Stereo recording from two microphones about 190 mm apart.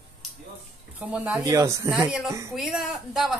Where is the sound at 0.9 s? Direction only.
10° right (ahead or behind).